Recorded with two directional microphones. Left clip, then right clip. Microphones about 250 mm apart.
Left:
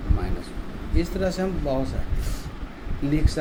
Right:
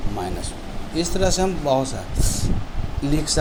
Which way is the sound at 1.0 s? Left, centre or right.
Centre.